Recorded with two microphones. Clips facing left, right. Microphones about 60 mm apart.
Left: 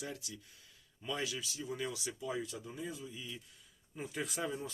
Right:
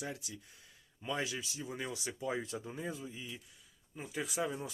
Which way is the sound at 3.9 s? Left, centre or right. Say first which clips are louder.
Right 1 dB; centre.